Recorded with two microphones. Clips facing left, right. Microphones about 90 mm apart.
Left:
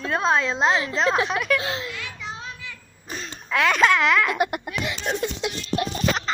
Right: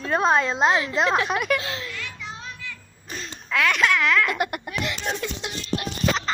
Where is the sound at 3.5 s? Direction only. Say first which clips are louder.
Left 2 dB; 25° left (ahead or behind).